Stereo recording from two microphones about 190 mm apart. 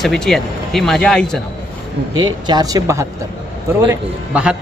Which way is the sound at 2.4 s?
20° right (ahead or behind).